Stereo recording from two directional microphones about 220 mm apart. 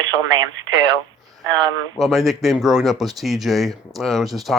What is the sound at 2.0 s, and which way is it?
Speech, centre (ahead or behind).